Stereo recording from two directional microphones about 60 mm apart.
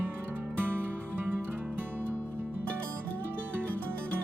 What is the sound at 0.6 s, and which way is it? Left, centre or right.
Music, right.